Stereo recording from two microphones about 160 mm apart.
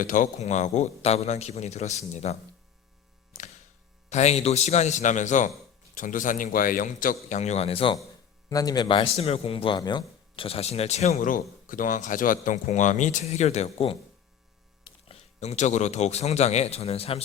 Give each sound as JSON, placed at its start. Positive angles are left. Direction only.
{"t": 0.0, "sound": "a man's voice", "side_deg": 55}
{"t": 4.1, "sound": "a man's voice", "side_deg": 45}
{"t": 8.4, "sound": "a man's voice", "side_deg": 25}
{"t": 11.2, "sound": "a man's voice", "side_deg": 60}